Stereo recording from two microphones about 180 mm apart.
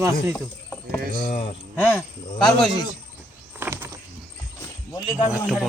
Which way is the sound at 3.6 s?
15° right (ahead or behind).